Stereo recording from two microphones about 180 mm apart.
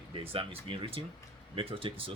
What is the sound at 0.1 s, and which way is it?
Speech, 30° right (ahead or behind).